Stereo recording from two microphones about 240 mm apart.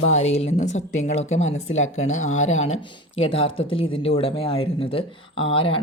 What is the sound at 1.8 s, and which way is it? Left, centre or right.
Speech, left.